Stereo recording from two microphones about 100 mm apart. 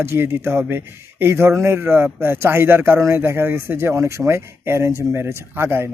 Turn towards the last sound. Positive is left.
turn(degrees=-25)  # may be behind; listen again after turning